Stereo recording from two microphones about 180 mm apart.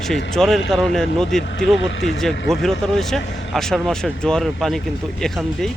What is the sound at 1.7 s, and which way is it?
Speech, 90° left.